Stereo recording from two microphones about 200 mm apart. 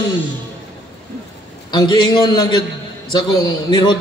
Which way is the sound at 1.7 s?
20° left (ahead or behind).